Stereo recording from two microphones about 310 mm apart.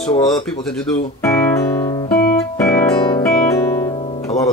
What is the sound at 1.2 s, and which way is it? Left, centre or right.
Music, centre.